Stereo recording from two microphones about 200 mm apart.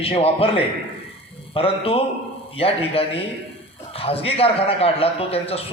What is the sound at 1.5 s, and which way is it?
A man's voice, 30° left (ahead or behind).